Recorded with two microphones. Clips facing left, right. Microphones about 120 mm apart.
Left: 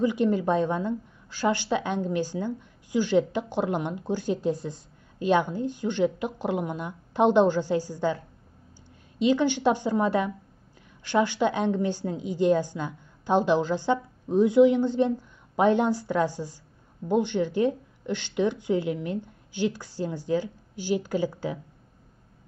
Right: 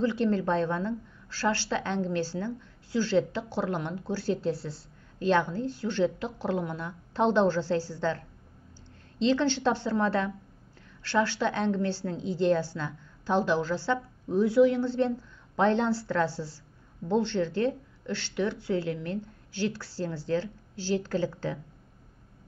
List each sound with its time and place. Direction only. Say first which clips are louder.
0.0 s a woman's voice: left 3 dB; 15° left (ahead or behind)